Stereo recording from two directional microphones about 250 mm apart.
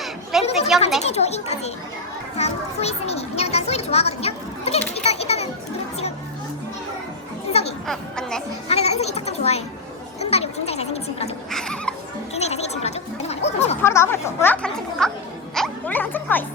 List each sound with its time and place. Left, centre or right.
0.0 s a sound: centre
0.7 s speech: centre
1.0 s a child's voice: left
7.9 s speech: centre
8.6 s a child's voice: left
10.2 s children playing: left
11.5 s music: centre
12.3 s gargling: left
13.8 s speech: centre
15.5 s music: centre